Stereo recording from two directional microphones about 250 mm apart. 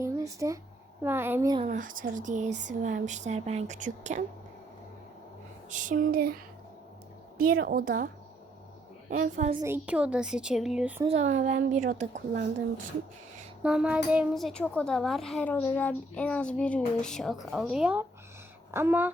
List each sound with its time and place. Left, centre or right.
0.0 s a woman's voice: centre
1.6 s speech: right
5.7 s speech: right
9.6 s a child's voice: centre
11.0 s speech: right
13.6 s a child's voice: centre